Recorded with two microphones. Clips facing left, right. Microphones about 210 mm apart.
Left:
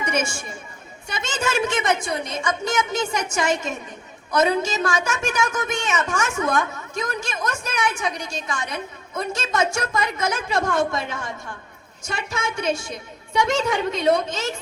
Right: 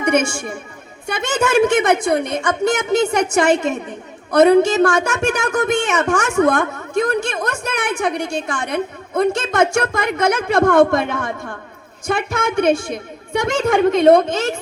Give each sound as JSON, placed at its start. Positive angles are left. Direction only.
{"t": 0.0, "sound": "a woman's voice", "side_deg": -60}